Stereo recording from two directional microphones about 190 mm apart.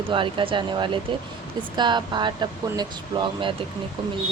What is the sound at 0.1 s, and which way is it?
Speech, 25° right (ahead or behind).